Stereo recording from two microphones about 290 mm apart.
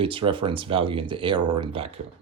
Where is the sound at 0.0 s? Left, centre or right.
Centre.